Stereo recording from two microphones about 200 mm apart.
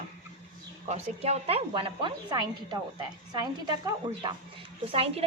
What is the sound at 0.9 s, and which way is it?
Speech, 35° right (ahead or behind).